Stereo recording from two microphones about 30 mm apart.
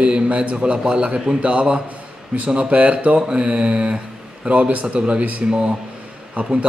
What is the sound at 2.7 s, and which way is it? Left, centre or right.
Speech, right.